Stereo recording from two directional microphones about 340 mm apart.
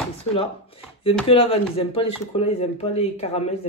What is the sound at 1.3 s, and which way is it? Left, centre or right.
Speech, centre.